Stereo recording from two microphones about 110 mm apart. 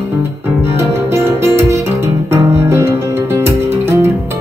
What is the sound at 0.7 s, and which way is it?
Music, 25° right (ahead or behind).